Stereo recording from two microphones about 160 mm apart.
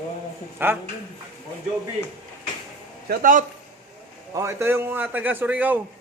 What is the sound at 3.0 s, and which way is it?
Speech, 60° right (ahead or behind).